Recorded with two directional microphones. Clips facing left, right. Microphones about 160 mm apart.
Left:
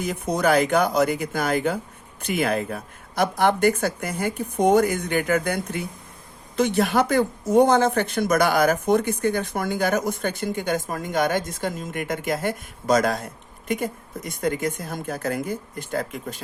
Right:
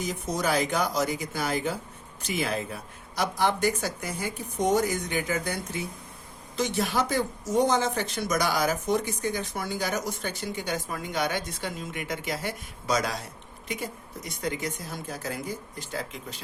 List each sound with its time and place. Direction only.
0.0 s speech: 60° left (ahead or behind)